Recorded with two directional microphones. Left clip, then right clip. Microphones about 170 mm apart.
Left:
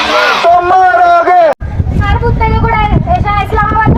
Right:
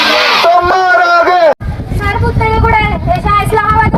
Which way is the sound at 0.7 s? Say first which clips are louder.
Left 2 dB; 30° right (ahead or behind).